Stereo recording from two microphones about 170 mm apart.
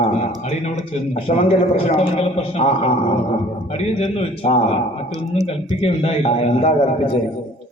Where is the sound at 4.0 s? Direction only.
35° left (ahead or behind).